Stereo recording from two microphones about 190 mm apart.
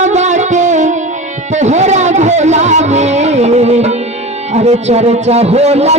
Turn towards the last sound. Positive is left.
turn(degrees=-35)  # may be behind; listen again after turning